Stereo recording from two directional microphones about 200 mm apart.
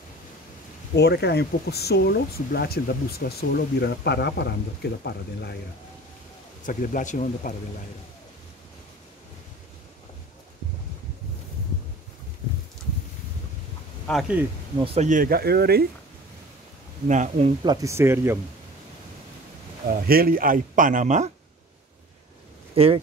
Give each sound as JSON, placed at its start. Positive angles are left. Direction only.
{"t": 0.9, "sound": "speech", "side_deg": 55}
{"t": 6.6, "sound": "speech", "side_deg": 40}
{"t": 14.0, "sound": "speech", "side_deg": 0}
{"t": 15.0, "sound": "speech", "side_deg": -40}
{"t": 17.1, "sound": "speech", "side_deg": -40}
{"t": 17.6, "sound": "speech", "side_deg": -15}
{"t": 19.9, "sound": "speech", "side_deg": -45}
{"t": 22.8, "sound": "speech", "side_deg": -30}